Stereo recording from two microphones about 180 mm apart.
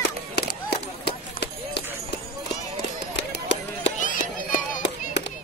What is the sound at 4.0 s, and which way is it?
Music, 45° left (ahead or behind).